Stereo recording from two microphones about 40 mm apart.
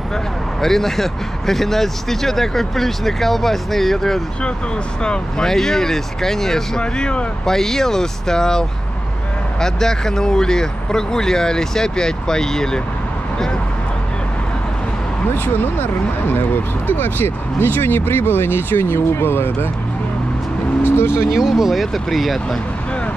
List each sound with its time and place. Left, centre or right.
0.6 s speech: centre
5.0 s speech: left
5.5 s speech: centre
6.8 s speech: left
7.4 s speech: centre
15.4 s speech: left
20.8 s vehicle: left
21.3 s speech: centre